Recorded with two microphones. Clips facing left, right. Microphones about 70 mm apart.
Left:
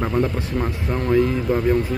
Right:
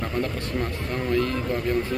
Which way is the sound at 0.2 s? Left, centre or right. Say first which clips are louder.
Left 5 dB; centre.